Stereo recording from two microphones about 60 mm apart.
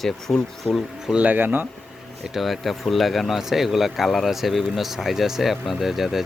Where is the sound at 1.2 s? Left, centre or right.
Right.